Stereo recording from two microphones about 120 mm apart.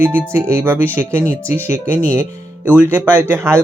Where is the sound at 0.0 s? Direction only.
20° right (ahead or behind).